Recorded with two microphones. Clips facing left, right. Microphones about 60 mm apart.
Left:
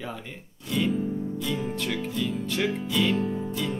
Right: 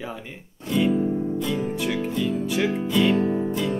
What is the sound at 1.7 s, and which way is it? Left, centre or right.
Speech, centre.